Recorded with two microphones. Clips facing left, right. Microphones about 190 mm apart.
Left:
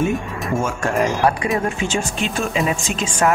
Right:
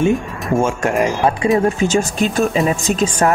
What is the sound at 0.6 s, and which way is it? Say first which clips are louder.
Speech: right 4 dB; 25° right (ahead or behind).